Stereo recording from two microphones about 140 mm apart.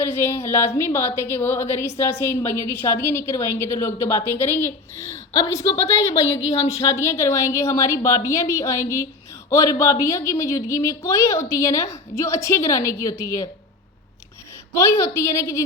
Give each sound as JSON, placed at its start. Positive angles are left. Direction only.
{"t": 0.0, "sound": "a woman's voice", "side_deg": 15}
{"t": 14.7, "sound": "a woman's voice", "side_deg": 20}